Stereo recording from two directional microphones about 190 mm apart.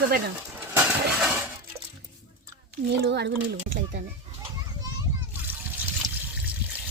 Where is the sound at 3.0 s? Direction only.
65° right (ahead or behind).